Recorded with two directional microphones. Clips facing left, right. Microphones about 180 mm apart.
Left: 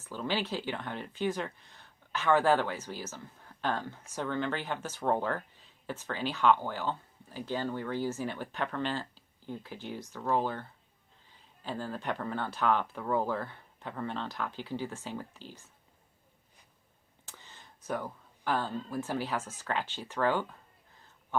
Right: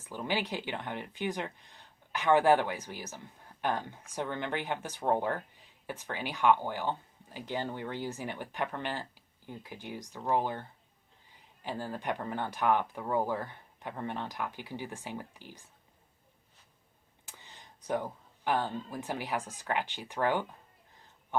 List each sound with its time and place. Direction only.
0.0 s speech: 15° right (ahead or behind)
17.2 s a sound: 15° right (ahead or behind)
18.4 s speech: 20° right (ahead or behind)